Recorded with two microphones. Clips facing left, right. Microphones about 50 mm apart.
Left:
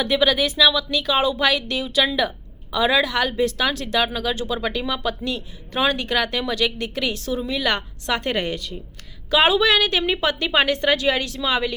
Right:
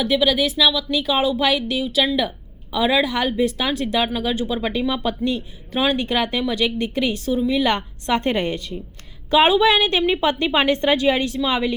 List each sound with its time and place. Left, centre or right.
0.0 s a woman's voice: centre; by 11.7 s right